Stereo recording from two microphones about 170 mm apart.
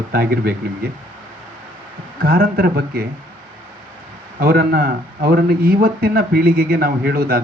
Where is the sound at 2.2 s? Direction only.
60° right (ahead or behind).